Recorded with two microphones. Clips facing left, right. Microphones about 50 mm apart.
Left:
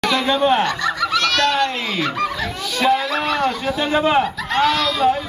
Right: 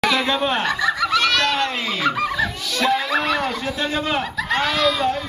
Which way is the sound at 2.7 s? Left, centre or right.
Centre.